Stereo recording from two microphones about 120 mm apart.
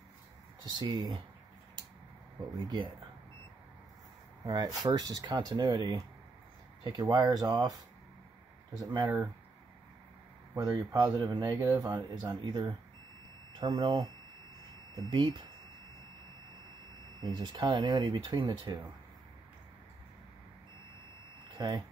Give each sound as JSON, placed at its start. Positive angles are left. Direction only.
{"t": 0.7, "sound": "speech", "side_deg": -35}
{"t": 2.4, "sound": "speech", "side_deg": -35}
{"t": 4.5, "sound": "speech", "side_deg": -30}
{"t": 9.0, "sound": "speech", "side_deg": -20}
{"t": 10.5, "sound": "speech", "side_deg": -30}
{"t": 17.2, "sound": "speech", "side_deg": -40}
{"t": 21.5, "sound": "speech", "side_deg": -40}